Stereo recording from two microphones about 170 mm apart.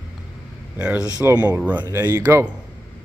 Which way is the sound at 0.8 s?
5° right (ahead or behind).